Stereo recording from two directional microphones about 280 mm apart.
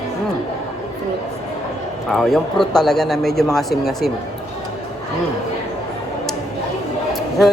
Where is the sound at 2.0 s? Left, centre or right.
Centre.